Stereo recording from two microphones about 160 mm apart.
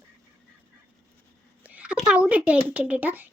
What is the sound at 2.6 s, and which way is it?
Speech, 10° right (ahead or behind).